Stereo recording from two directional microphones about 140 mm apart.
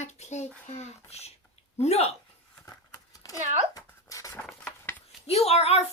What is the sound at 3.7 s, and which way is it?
Writing, 25° left (ahead or behind).